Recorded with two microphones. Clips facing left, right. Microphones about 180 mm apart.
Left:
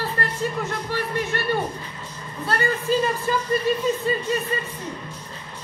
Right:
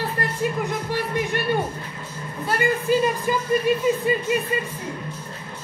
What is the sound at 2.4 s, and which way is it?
Speech, 15° right (ahead or behind).